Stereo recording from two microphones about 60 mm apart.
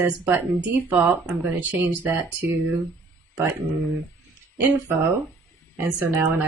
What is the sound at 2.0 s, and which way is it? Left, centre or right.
Speech, right.